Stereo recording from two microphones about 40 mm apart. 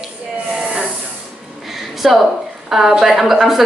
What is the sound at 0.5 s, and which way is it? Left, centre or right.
Hiss, centre.